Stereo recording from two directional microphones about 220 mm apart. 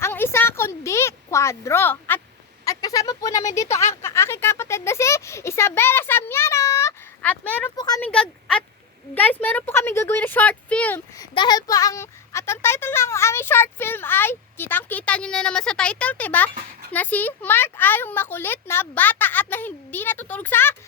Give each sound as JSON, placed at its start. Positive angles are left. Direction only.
{"t": 0.0, "sound": "a sound", "side_deg": 10}
{"t": 2.6, "sound": "speech", "side_deg": 15}
{"t": 8.0, "sound": "speech", "side_deg": 5}
{"t": 11.3, "sound": "speech", "side_deg": 20}